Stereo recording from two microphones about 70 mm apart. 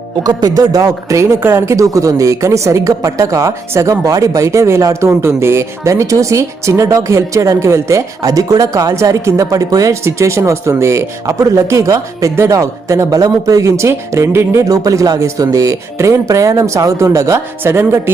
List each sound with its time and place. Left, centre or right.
0.2 s speech: right
1.2 s a woman's voice: right
5.0 s a woman's voice: right
10.0 s a woman's voice: right
14.7 s speech: right
15.2 s a woman's voice: right